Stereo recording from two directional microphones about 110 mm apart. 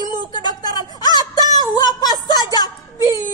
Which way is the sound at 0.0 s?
40° left (ahead or behind).